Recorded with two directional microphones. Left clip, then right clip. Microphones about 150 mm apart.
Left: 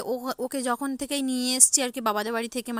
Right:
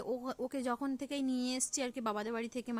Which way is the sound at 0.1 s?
35° left (ahead or behind).